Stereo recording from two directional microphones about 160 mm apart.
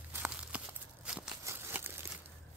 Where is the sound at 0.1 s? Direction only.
10° right (ahead or behind).